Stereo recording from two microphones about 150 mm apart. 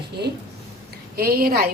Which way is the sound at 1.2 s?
90° right.